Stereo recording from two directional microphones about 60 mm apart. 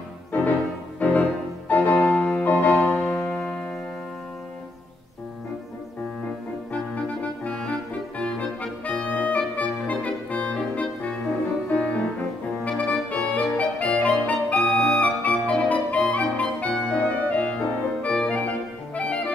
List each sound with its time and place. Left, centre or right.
0.3 s music: left
7.4 s music: centre
8.2 s clarinet: centre
9.8 s music: left
13.1 s clarinet: left
14.7 s music: centre
15.0 s clarinet: left